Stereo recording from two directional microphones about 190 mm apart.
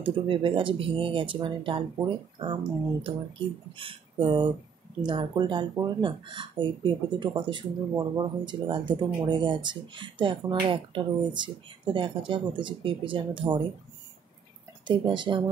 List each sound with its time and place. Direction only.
0.0 s speech: 25° right (ahead or behind)
14.9 s speech: 25° right (ahead or behind)